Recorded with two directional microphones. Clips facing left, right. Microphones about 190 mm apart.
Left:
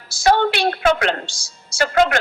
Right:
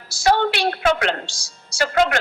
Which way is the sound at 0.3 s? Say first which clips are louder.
Left 2 dB; 50° left (ahead or behind).